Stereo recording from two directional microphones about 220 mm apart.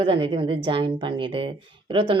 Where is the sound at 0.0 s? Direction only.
25° right (ahead or behind).